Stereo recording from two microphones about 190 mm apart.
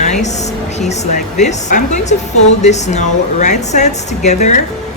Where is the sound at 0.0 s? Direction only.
40° left (ahead or behind).